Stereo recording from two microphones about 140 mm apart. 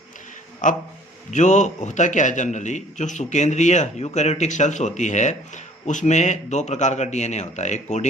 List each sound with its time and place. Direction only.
0.6 s a man's voice: 65° left (ahead or behind)